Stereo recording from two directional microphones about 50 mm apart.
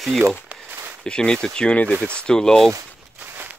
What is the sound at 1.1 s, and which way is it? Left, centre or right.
Speech, centre.